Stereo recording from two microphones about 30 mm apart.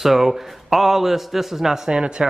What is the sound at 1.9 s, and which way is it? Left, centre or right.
Speech, right.